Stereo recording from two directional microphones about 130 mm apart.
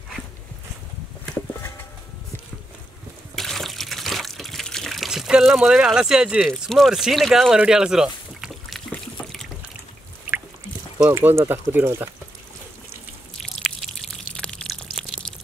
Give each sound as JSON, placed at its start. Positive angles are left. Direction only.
{"t": 3.3, "sound": "water", "side_deg": 0}
{"t": 11.0, "sound": "speech", "side_deg": -15}
{"t": 13.4, "sound": "a sound", "side_deg": 0}